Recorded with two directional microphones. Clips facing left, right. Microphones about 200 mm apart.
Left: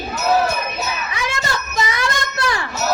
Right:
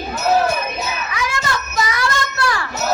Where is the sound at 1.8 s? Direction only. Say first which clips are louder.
Right 1 dB; 25° left (ahead or behind).